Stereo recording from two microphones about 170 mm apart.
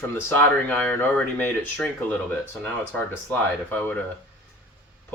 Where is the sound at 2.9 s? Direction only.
10° left (ahead or behind).